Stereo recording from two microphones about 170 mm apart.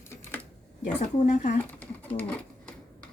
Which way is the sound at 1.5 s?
10° left (ahead or behind).